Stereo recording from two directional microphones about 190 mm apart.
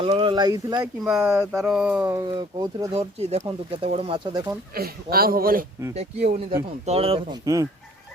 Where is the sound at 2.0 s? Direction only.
20° right (ahead or behind).